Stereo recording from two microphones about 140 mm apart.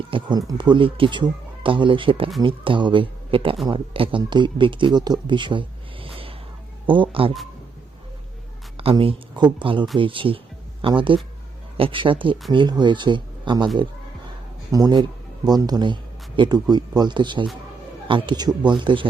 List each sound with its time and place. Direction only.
0.1 s speech: 30° right (ahead or behind)
8.8 s speech: 40° right (ahead or behind)
14.7 s a man's voice: 25° right (ahead or behind)